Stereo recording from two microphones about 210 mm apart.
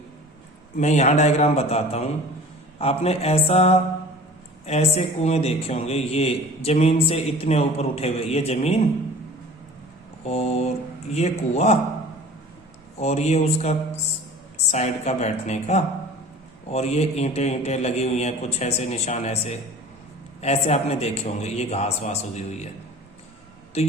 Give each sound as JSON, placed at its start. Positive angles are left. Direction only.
{"t": 0.8, "sound": "a man's voice", "side_deg": 35}
{"t": 10.2, "sound": "a man's voice", "side_deg": 30}
{"t": 13.0, "sound": "a man's voice", "side_deg": 30}
{"t": 23.7, "sound": "a man's voice", "side_deg": 30}